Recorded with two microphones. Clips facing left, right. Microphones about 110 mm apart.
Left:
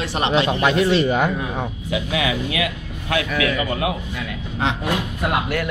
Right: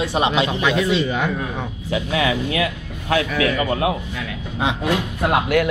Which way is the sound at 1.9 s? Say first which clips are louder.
Right 3 dB; 40° right (ahead or behind).